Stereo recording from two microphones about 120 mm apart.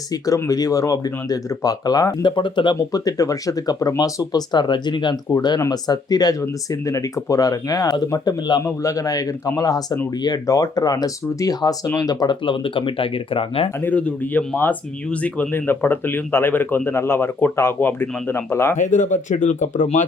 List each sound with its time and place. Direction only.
0.1 s speech: 30° left (ahead or behind)
2.7 s a man's voice: 30° left (ahead or behind); by 13.7 s 50° left (ahead or behind)
13.8 s speech: 15° left (ahead or behind)
18.8 s speech: 90° left